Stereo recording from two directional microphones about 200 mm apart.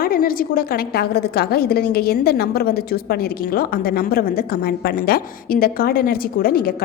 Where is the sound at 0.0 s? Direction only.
45° left (ahead or behind).